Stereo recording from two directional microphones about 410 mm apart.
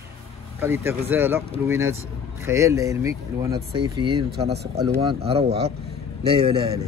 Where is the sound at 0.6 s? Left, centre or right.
Centre.